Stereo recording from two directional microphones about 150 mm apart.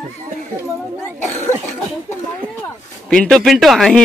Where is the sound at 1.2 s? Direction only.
50° left (ahead or behind).